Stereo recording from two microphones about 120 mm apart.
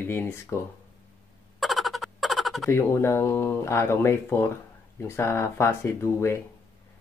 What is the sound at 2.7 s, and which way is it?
Speech, 20° left (ahead or behind).